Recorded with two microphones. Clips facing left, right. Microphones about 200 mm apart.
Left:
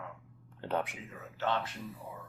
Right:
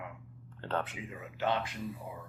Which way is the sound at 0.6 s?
15° left (ahead or behind).